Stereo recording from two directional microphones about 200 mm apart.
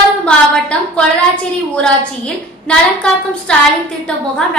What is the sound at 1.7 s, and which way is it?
A woman's voice, 5° left (ahead or behind).